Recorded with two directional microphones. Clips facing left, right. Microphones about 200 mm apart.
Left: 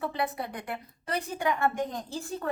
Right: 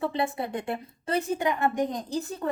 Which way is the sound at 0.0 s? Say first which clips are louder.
Right 3 dB; 25° right (ahead or behind).